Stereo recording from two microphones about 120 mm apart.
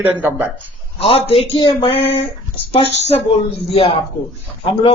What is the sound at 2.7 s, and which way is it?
A man's voice, 55° left (ahead or behind).